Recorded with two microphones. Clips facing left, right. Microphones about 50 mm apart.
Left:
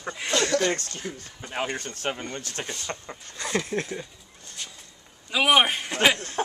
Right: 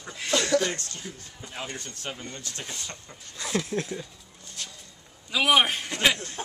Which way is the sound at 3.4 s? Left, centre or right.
Centre.